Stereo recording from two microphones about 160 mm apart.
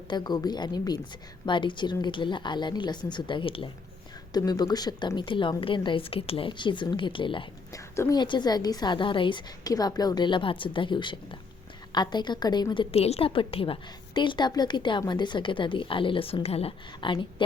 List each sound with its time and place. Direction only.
0.1 s a woman's voice: 25° left (ahead or behind)